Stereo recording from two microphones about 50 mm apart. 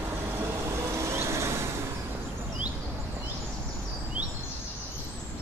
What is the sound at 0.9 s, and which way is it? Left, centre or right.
Vehicle, right.